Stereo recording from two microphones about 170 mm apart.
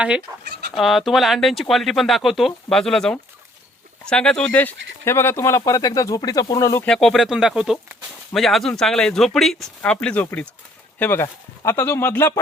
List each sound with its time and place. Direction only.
0.4 s chicken: 80° right
0.7 s speech: centre (ahead or behind); by 6.8 s 20° left (ahead or behind)
6.8 s speech: centre (ahead or behind)